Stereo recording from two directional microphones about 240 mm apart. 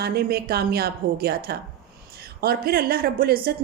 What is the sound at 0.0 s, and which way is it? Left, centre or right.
A woman's voice, right.